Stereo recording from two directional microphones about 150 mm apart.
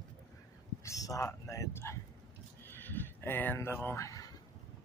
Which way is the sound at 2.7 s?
15° left (ahead or behind).